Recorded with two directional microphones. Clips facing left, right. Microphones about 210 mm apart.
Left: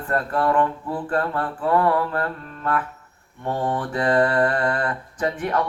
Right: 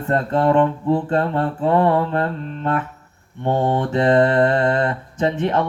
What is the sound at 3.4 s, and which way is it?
Speech, 25° right (ahead or behind).